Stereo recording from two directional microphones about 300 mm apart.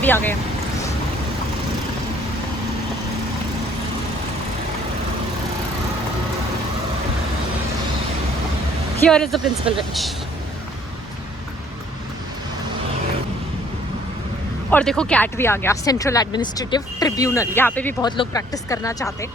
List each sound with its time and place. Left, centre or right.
0.0 s speech: centre
9.0 s speech: centre
14.7 s speech: centre